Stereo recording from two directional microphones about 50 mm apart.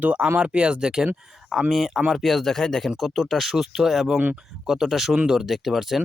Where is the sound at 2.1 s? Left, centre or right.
Centre.